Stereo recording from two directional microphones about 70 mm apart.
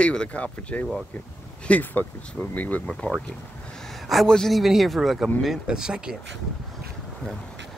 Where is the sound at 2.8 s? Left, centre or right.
Centre.